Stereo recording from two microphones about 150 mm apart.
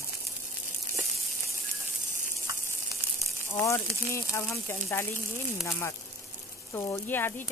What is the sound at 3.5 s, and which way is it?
Speech, 15° left (ahead or behind).